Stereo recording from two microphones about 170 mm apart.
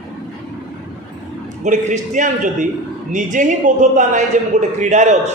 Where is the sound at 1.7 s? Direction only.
45° right (ahead or behind).